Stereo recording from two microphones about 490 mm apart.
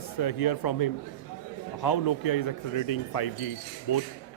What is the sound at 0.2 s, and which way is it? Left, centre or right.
Speech, left.